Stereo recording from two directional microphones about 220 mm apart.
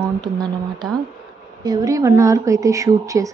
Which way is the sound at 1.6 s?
15° right (ahead or behind).